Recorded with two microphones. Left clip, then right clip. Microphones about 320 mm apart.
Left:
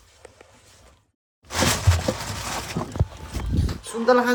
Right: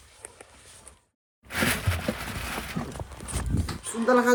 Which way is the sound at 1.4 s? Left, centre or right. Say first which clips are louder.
Left 4 dB; left.